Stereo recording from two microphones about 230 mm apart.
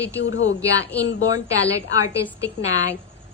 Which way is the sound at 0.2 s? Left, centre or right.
Left.